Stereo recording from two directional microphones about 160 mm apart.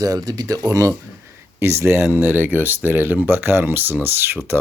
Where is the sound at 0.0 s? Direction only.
25° right (ahead or behind).